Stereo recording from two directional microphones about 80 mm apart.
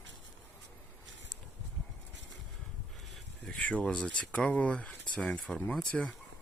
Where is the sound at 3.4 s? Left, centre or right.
Centre.